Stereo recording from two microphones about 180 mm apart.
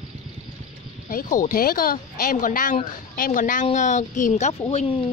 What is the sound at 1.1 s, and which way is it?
A woman's voice, 50° left (ahead or behind).